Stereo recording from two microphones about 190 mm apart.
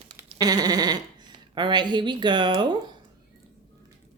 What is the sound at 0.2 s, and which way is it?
Speech, 20° right (ahead or behind).